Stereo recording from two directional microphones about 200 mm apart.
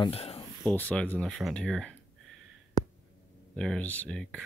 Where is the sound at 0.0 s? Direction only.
30° left (ahead or behind).